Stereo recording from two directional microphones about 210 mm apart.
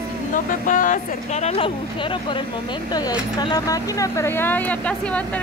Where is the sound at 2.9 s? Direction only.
20° left (ahead or behind).